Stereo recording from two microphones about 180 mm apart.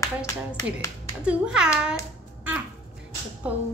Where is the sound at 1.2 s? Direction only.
5° right (ahead or behind).